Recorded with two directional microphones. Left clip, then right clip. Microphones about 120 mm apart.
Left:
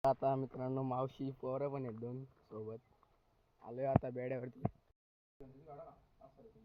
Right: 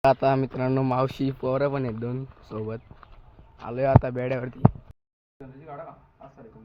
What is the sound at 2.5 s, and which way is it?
Speech, 5° right (ahead or behind).